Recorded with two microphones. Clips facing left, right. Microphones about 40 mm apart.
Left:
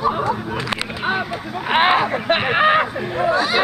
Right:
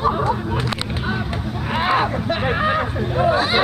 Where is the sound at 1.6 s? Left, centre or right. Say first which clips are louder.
Left 3 dB; left.